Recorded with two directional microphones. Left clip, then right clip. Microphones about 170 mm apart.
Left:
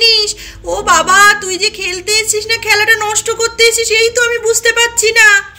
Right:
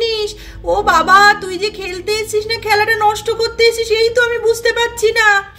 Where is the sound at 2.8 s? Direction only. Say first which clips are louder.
Left 2 dB; 30° right (ahead or behind).